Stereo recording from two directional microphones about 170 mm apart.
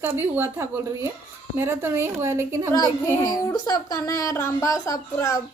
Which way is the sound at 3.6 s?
20° left (ahead or behind).